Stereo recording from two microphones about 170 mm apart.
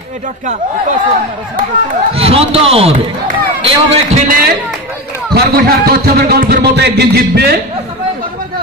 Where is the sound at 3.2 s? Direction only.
60° right (ahead or behind).